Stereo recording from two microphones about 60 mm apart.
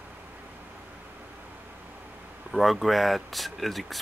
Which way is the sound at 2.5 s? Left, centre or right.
Centre.